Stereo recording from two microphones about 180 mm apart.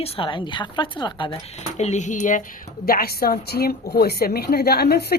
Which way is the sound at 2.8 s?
55° left (ahead or behind).